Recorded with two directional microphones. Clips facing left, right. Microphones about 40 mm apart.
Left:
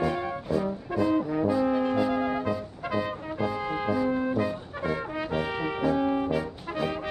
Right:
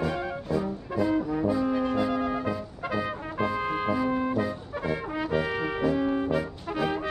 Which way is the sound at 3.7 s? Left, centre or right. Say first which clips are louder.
Even; centre.